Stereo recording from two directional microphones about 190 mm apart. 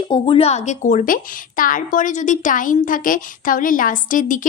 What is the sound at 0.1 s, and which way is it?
A woman's voice, 30° left (ahead or behind).